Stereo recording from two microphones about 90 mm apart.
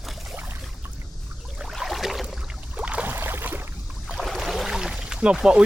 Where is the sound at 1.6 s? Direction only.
Centre (ahead or behind).